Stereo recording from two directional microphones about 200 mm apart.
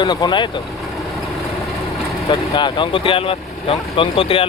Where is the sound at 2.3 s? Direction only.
25° left (ahead or behind).